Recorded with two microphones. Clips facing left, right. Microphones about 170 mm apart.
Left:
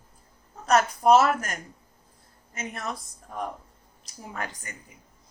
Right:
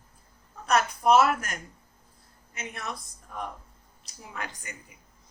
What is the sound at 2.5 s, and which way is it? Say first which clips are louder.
Speech: left 3 dB; 45° left (ahead or behind).